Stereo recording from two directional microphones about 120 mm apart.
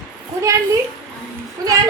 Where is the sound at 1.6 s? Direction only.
30° right (ahead or behind).